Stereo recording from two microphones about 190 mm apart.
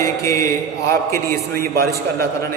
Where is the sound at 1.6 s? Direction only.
50° right (ahead or behind).